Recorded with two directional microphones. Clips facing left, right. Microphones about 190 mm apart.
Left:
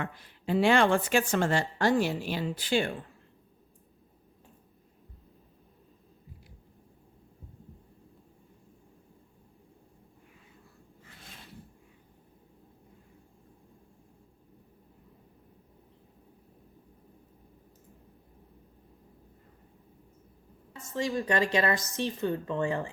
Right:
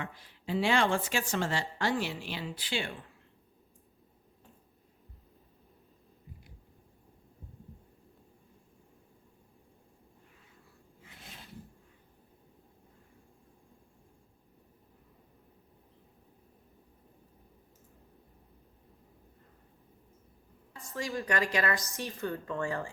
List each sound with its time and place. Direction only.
0.0 s speech: 55° left (ahead or behind)
20.9 s speech: 25° left (ahead or behind)